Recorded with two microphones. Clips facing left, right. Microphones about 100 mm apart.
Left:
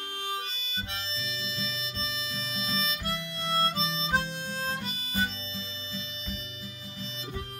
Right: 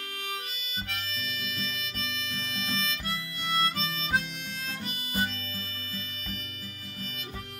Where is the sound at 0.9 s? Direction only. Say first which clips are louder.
Even; 25° left (ahead or behind).